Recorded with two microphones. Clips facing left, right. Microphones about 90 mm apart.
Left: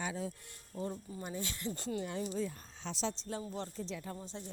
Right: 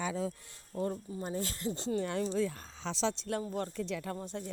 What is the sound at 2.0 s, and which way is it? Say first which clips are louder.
Speech: right 6 dB; 90° right.